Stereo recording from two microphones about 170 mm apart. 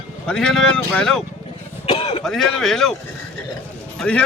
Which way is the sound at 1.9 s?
35° left (ahead or behind).